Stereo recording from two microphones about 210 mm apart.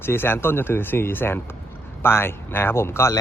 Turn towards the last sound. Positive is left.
turn(degrees=15)  # may be behind; listen again after turning